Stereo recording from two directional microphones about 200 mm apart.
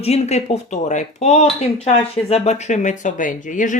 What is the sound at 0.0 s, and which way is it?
A woman's voice, 35° left (ahead or behind).